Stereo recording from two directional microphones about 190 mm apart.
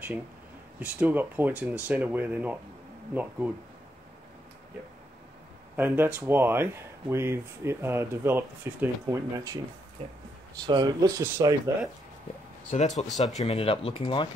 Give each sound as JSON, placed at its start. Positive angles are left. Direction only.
{"t": 0.7, "sound": "speech", "side_deg": -10}
{"t": 5.8, "sound": "speech", "side_deg": -10}
{"t": 10.0, "sound": "speech", "side_deg": -35}
{"t": 10.7, "sound": "speech", "side_deg": -20}
{"t": 12.7, "sound": "speech", "side_deg": 35}
{"t": 13.1, "sound": "speech", "side_deg": 0}
{"t": 13.4, "sound": "speech", "side_deg": 35}